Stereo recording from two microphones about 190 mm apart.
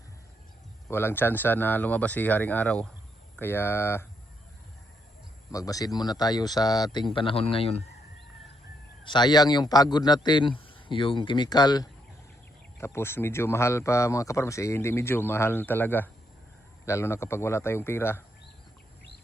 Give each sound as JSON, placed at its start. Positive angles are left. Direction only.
{"t": 0.9, "sound": "speech", "side_deg": 10}
{"t": 5.5, "sound": "a man's voice", "side_deg": 20}
{"t": 9.0, "sound": "a man's voice", "side_deg": 25}